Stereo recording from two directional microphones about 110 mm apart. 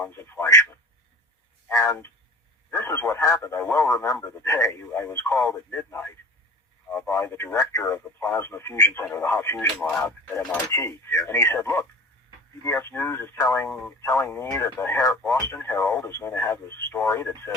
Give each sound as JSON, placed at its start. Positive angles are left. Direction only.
{"t": 0.0, "sound": "speech", "side_deg": 20}
{"t": 6.8, "sound": "speech", "side_deg": 10}
{"t": 7.1, "sound": "speech", "side_deg": 25}
{"t": 10.1, "sound": "speech", "side_deg": 25}